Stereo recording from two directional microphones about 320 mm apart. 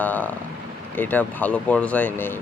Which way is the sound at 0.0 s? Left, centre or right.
Centre.